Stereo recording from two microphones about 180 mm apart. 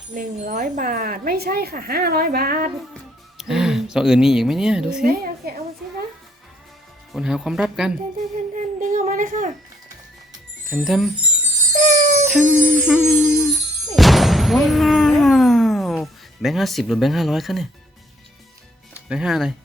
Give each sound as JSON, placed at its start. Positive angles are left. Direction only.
{"t": 0.1, "sound": "speech", "side_deg": -50}
{"t": 3.3, "sound": "speech", "side_deg": 0}
{"t": 5.0, "sound": "a woman's voice", "side_deg": -55}
{"t": 7.1, "sound": "speech", "side_deg": -5}
{"t": 8.8, "sound": "a woman's voice", "side_deg": -45}
{"t": 10.7, "sound": "speech", "side_deg": 0}
{"t": 11.7, "sound": "music", "side_deg": -40}
{"t": 12.3, "sound": "jingle bell", "side_deg": -10}
{"t": 13.9, "sound": "a sound", "side_deg": 0}
{"t": 19.0, "sound": "speech", "side_deg": -5}